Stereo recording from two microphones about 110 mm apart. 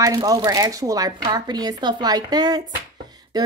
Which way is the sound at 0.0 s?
35° right (ahead or behind).